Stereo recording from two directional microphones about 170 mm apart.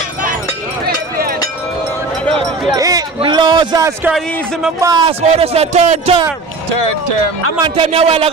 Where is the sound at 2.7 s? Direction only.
20° right (ahead or behind).